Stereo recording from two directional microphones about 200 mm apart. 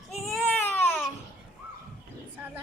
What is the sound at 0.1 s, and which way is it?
Baby cry, centre (ahead or behind).